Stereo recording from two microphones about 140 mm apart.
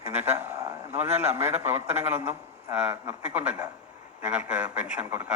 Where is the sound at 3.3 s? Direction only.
10° right (ahead or behind).